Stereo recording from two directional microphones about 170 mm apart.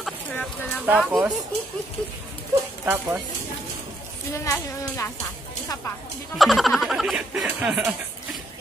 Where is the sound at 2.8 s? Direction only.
10° right (ahead or behind).